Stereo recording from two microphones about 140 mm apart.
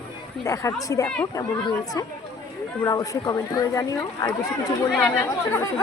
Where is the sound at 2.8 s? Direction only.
25° left (ahead or behind).